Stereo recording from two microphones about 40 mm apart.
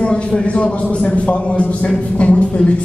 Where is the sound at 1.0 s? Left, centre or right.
Left.